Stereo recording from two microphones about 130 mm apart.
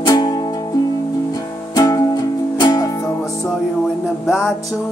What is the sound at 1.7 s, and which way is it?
Music, 25° left (ahead or behind).